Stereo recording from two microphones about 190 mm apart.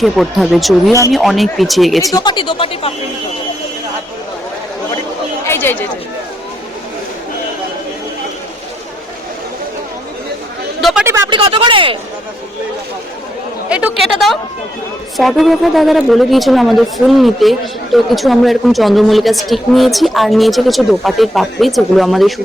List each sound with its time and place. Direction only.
0.0 s speech: centre (ahead or behind)
2.1 s speech: 25° left (ahead or behind)
5.5 s chatter: 10° left (ahead or behind)
10.8 s a sound: centre (ahead or behind)
11.0 s a sound: 15° right (ahead or behind)
11.3 s speech: 30° right (ahead or behind)
13.7 s a woman's voice: 5° right (ahead or behind)
15.2 s speech: centre (ahead or behind)